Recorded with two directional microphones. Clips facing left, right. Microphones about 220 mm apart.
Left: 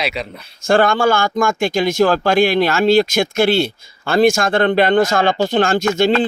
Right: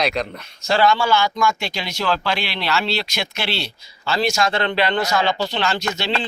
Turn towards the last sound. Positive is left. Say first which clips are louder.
# left 10 dB
turn(degrees=50)  # may be behind; listen again after turning